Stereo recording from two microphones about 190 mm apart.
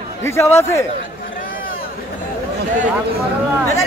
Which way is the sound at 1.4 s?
50° left (ahead or behind).